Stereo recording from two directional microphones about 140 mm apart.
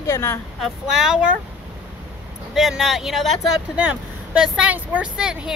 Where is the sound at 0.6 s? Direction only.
Centre (ahead or behind).